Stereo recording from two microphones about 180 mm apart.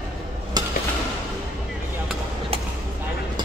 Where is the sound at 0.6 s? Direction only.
20° right (ahead or behind).